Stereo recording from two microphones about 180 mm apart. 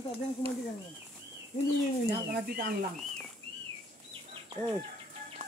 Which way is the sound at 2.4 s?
55° right (ahead or behind).